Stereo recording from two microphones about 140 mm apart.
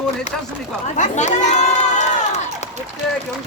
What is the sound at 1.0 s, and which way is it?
Crowd, 60° left (ahead or behind).